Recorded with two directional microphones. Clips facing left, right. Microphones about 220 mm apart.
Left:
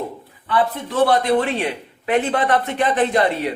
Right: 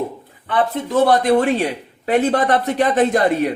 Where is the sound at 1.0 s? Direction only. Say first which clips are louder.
Right 2 dB; 45° right (ahead or behind).